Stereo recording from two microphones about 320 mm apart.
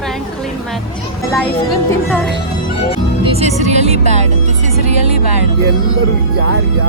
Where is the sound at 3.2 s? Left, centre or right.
Centre.